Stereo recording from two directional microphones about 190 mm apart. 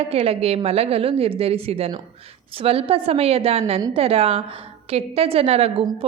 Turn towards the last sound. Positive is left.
turn(degrees=-30)  # may be behind; listen again after turning